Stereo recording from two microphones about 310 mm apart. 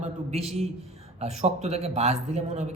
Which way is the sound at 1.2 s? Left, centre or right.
Right.